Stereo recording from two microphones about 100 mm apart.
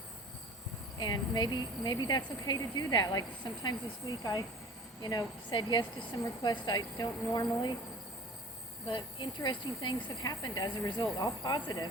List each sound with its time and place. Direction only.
0.9 s speech: 45° left (ahead or behind)
8.9 s speech: 55° left (ahead or behind)